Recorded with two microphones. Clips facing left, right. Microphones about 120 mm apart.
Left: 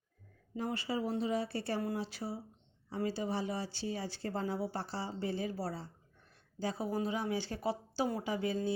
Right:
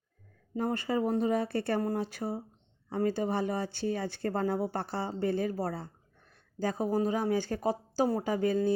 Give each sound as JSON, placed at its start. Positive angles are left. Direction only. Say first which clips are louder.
{"t": 0.5, "sound": "speech", "louder": "right 6 dB", "side_deg": -50}